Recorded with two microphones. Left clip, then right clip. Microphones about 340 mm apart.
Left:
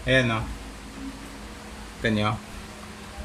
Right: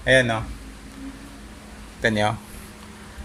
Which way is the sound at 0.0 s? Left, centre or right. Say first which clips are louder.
Right 5 dB; centre.